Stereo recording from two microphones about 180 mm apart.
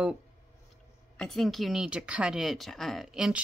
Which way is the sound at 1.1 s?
Centre (ahead or behind).